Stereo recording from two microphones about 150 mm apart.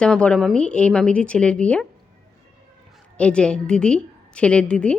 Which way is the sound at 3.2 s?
5° left (ahead or behind).